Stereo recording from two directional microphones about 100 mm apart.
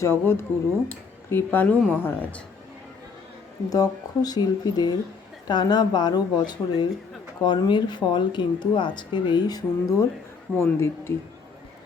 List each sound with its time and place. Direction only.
0.0 s speech: 25° left (ahead or behind)
3.7 s speech: 40° left (ahead or behind)
10.6 s speech: 25° left (ahead or behind)